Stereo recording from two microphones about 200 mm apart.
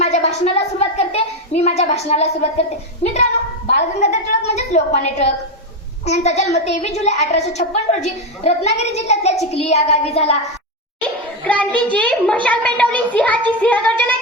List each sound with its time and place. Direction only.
0.0 s a child's voice: 35° left (ahead or behind)
11.4 s a child's voice: 5° left (ahead or behind)